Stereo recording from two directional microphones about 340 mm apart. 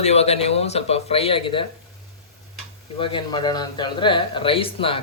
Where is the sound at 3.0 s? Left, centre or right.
Centre.